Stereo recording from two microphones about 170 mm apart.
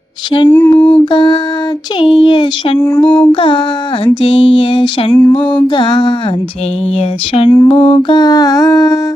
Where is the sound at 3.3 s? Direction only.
30° left (ahead or behind).